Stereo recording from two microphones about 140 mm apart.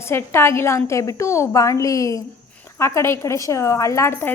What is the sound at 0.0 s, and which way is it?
A woman's voice, 15° left (ahead or behind).